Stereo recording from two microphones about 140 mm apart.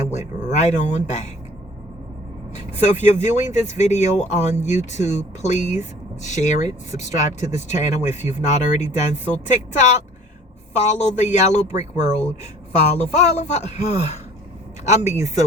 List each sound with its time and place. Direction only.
0.1 s speech: 55° left (ahead or behind)
3.1 s speech: 55° left (ahead or behind)
13.0 s speech: 55° left (ahead or behind)